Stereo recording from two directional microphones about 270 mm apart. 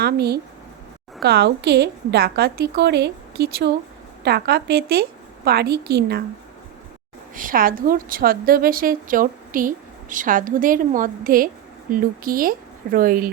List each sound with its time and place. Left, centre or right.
0.0 s a woman's voice: right
7.3 s a woman's voice: right